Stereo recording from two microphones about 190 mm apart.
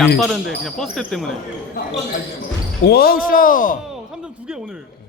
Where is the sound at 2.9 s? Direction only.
55° left (ahead or behind).